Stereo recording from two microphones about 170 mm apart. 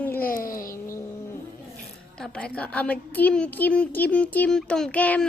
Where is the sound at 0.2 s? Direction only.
55° left (ahead or behind).